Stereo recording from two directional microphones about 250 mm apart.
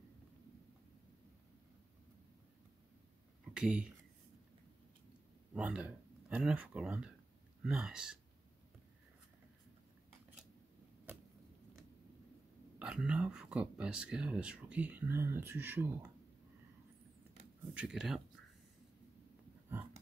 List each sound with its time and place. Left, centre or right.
3.5 s speech: centre
5.5 s speech: centre
12.7 s speech: centre
17.7 s speech: centre